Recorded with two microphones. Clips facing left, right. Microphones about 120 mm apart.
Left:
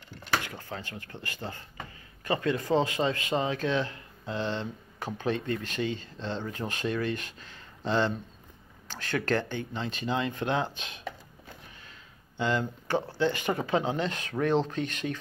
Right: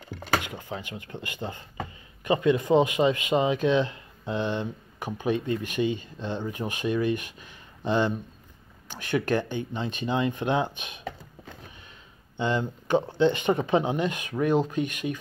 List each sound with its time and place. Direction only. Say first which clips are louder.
0.4 s a man's voice: right 3 dB; 15° right (ahead or behind)